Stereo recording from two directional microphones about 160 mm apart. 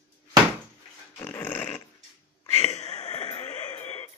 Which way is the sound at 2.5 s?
40° left (ahead or behind).